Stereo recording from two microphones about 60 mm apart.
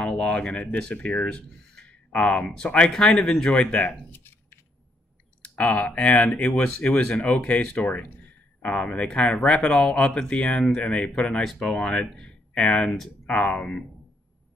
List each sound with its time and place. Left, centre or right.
0.0 s speech: centre
3.4 s speech: left
5.4 s speech: left